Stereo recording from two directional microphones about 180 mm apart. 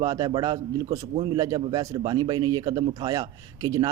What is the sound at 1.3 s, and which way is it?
A man's voice, 20° right (ahead or behind).